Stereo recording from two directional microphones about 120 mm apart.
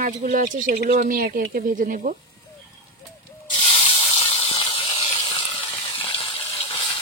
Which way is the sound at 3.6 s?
55° left (ahead or behind).